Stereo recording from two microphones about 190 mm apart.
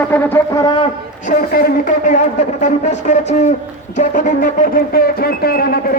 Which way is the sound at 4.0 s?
40° left (ahead or behind).